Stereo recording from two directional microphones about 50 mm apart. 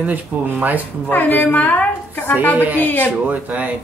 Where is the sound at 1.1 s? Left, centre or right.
Left.